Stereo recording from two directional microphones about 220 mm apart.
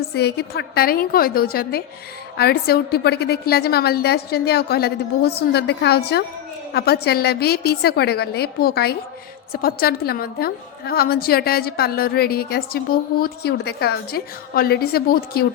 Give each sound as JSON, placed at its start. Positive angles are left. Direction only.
{"t": 0.1, "sound": "a woman's voice", "side_deg": 50}